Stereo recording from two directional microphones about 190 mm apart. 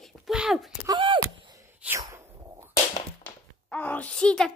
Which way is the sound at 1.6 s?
15° right (ahead or behind).